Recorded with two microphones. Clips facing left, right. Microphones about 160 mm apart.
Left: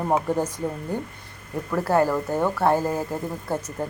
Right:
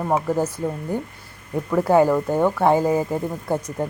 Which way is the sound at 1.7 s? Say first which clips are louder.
Right 5 dB; 10° right (ahead or behind).